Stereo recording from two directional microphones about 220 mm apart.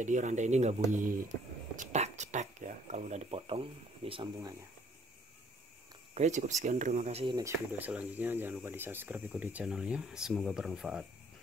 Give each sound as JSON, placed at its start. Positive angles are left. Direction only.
{"t": 0.0, "sound": "speech", "side_deg": -35}
{"t": 1.8, "sound": "a sound", "side_deg": -30}
{"t": 6.1, "sound": "speech", "side_deg": -30}